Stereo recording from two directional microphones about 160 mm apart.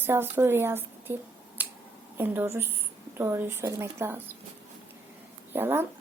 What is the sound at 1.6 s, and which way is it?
Finger snapping, 10° right (ahead or behind).